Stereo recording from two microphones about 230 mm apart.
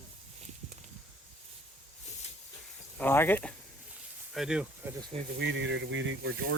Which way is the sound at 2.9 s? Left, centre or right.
Centre.